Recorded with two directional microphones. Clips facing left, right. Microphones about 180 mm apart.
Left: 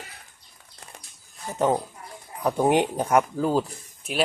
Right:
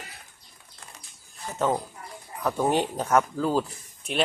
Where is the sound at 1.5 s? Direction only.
15° left (ahead or behind).